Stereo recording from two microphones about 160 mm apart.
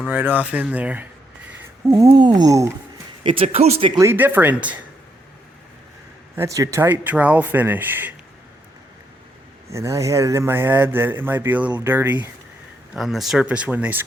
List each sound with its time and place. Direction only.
0.1 s speech: 10° right (ahead or behind)
2.0 s a sound: 30° right (ahead or behind)
3.2 s speech: 40° right (ahead or behind)
3.9 s speech: 15° right (ahead or behind)
6.3 s speech: 20° right (ahead or behind)
9.6 s speech: 20° right (ahead or behind)
12.9 s speech: centre (ahead or behind)